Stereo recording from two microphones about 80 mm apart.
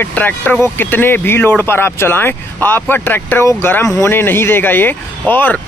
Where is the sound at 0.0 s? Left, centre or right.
Left.